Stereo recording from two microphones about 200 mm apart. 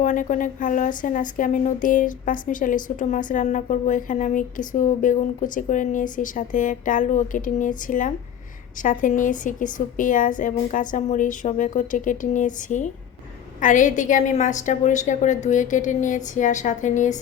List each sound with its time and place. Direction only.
0.0 s speech: 40° left (ahead or behind)